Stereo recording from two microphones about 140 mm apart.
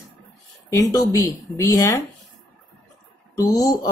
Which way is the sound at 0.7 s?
20° left (ahead or behind).